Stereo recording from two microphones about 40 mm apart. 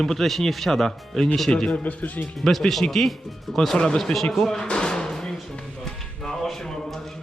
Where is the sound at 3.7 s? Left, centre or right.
Centre.